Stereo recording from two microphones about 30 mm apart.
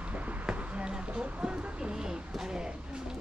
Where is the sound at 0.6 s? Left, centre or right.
Right.